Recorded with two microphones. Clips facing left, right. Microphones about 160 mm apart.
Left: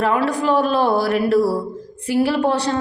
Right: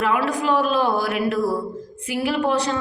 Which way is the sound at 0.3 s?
35° left (ahead or behind).